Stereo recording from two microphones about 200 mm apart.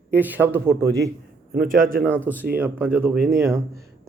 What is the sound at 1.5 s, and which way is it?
Speech, 45° right (ahead or behind).